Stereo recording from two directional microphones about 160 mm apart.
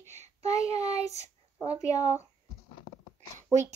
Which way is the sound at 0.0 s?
45° right (ahead or behind).